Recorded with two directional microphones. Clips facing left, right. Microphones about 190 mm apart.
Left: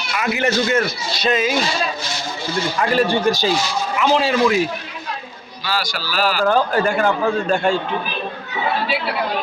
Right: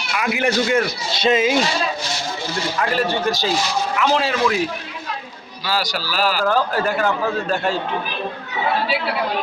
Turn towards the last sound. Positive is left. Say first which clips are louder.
# left 3 dB
turn(degrees=-5)  # may be behind; listen again after turning